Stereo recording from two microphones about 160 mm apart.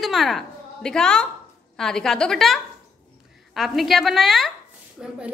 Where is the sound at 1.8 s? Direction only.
5° left (ahead or behind).